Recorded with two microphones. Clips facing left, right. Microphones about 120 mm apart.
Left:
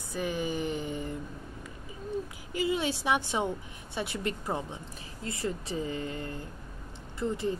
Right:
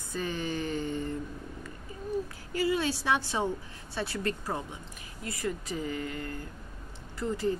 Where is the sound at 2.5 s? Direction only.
20° left (ahead or behind).